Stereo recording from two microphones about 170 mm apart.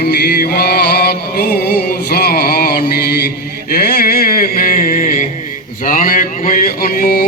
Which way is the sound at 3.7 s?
60° left (ahead or behind).